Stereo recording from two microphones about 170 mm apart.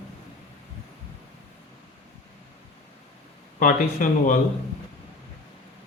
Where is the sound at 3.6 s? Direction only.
50° left (ahead or behind).